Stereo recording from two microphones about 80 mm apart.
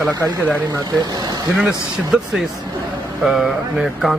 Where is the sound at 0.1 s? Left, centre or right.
Right.